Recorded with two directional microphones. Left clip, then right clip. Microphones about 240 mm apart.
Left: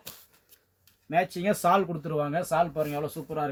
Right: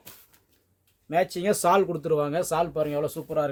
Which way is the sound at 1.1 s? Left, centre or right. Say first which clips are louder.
Right 2 dB; right.